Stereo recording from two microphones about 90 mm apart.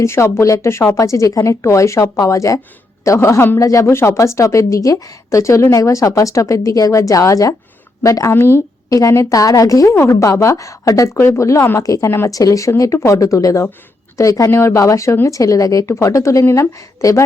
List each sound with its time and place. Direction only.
0.0 s speech: 30° left (ahead or behind)